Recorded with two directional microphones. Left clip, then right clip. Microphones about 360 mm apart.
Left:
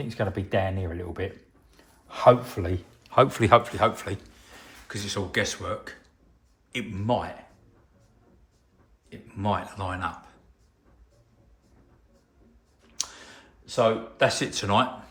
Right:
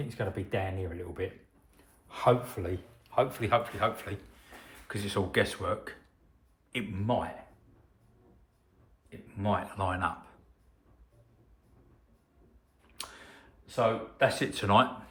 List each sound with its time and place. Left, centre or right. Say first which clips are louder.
0.1 s a man's voice: left 8 dB; left
4.7 s speech: left 1 dB; centre
9.0 s speech: left 4 dB; centre
12.9 s a sound: left 9 dB; centre